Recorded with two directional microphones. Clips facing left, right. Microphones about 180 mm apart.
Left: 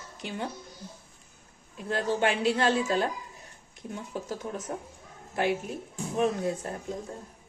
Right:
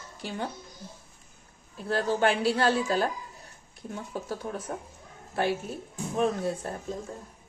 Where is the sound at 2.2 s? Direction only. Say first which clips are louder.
Right 1 dB; 20° left (ahead or behind).